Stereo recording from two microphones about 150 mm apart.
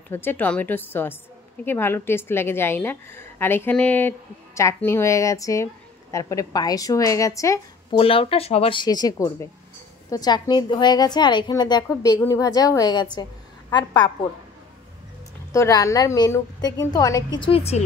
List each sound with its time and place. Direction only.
0.1 s a woman's voice: 15° left (ahead or behind)
8.0 s a woman's voice: 40° left (ahead or behind)
15.5 s a woman's voice: 20° left (ahead or behind)
17.4 s speech: 40° left (ahead or behind)